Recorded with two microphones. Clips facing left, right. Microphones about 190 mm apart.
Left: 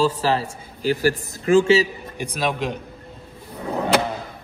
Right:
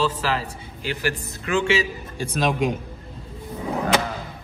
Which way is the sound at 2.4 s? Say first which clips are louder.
Right 2 dB; centre (ahead or behind).